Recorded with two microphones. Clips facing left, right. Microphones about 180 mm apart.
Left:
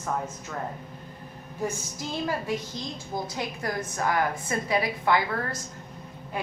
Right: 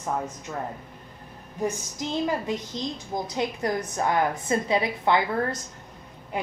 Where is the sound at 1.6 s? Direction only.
15° right (ahead or behind).